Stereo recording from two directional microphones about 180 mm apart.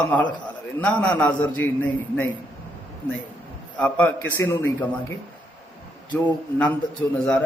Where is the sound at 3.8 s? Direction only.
10° left (ahead or behind).